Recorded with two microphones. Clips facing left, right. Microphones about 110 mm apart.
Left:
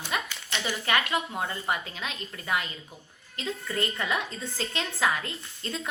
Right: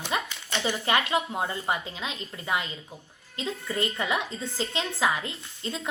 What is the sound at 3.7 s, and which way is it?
A woman's voice, 25° right (ahead or behind).